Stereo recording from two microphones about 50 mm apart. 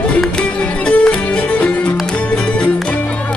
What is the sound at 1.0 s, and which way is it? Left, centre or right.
Music, left.